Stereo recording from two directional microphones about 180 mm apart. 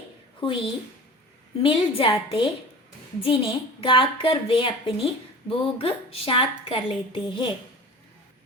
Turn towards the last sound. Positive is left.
turn(degrees=25)  # may be behind; listen again after turning